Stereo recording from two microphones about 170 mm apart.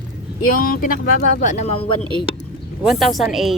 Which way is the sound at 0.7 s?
55° left (ahead or behind).